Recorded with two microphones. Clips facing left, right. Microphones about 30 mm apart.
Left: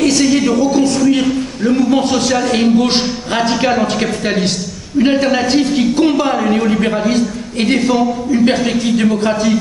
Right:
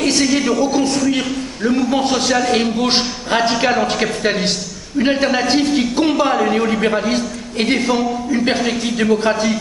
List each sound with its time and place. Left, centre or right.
0.2 s a woman's voice: centre